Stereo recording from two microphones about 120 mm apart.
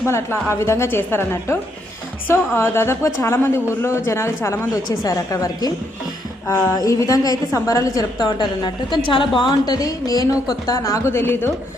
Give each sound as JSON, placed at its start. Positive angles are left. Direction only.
{"t": 0.1, "sound": "a woman's voice", "side_deg": 20}